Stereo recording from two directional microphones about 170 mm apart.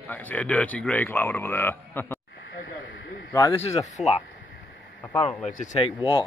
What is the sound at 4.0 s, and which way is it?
Speech, 5° right (ahead or behind).